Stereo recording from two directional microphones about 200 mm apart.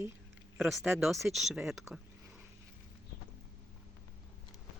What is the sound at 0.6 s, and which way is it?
Speech, centre (ahead or behind).